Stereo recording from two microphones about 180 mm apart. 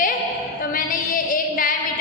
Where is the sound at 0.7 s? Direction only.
50° left (ahead or behind).